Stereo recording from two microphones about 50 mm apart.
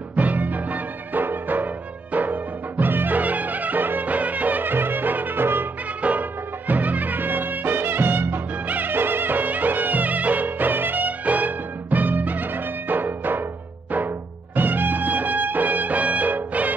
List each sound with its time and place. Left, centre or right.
0.1 s music: right
6.0 s music: right